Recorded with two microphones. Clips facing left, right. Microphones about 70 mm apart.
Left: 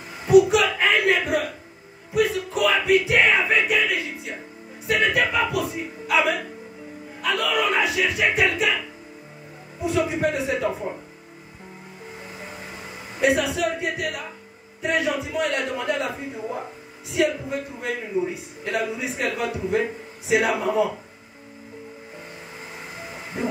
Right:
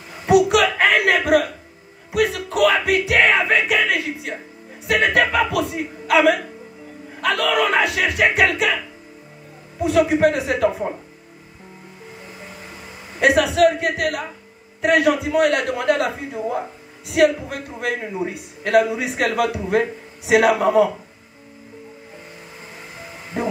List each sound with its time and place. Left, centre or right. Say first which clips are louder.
0.3 s a sound: right 1 dB; right
2.1 s music: right 3 dB; right
4.8 s a man's voice: right 4 dB; right
9.8 s a man's voice: right 7 dB; right
13.2 s a man's voice: right 6 dB; right